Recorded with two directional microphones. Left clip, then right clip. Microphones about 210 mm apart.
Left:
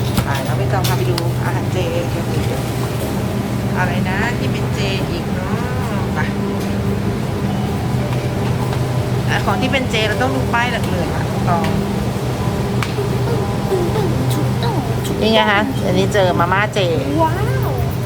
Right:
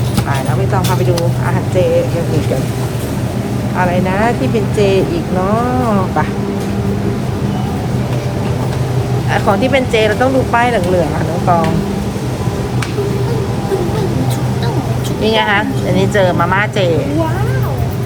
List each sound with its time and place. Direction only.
9.3 s speech: 10° left (ahead or behind)
15.2 s speech: 30° left (ahead or behind)